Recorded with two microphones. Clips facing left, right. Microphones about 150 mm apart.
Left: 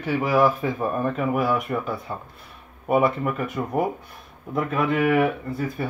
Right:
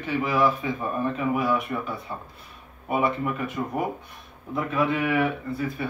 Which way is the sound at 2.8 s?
55° left (ahead or behind).